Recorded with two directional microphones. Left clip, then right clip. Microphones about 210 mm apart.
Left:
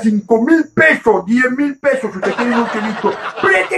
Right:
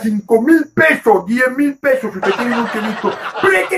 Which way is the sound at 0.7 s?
5° right (ahead or behind).